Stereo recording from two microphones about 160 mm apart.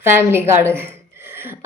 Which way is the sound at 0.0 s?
15° right (ahead or behind).